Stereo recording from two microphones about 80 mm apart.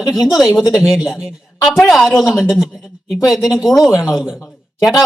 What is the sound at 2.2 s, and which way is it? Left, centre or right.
A woman's voice, centre.